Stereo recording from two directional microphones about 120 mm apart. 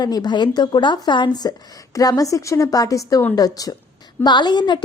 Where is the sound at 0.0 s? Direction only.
35° left (ahead or behind).